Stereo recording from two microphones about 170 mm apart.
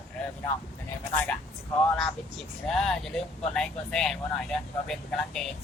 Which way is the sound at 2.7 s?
5° left (ahead or behind).